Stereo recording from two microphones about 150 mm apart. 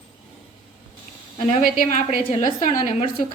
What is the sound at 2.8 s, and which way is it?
Speech, 40° left (ahead or behind).